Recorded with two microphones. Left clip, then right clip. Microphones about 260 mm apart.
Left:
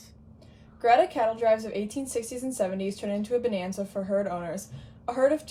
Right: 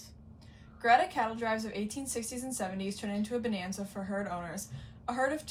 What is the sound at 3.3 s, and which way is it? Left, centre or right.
Speech, left.